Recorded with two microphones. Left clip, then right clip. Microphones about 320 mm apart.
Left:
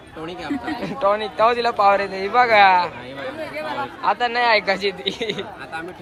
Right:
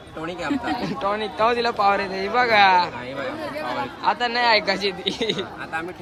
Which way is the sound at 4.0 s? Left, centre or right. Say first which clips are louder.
Left 2 dB; centre.